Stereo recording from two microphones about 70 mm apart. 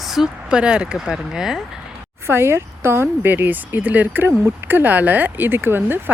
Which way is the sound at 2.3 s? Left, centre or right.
Right.